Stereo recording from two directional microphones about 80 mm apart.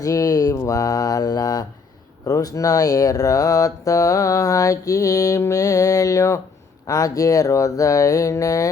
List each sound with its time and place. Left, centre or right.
0.0 s speech: left